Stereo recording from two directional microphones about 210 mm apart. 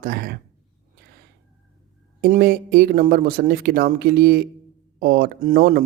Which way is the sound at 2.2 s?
45° right (ahead or behind).